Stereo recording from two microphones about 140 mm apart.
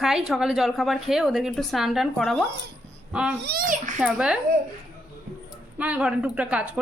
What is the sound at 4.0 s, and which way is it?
Speech, 5° right (ahead or behind).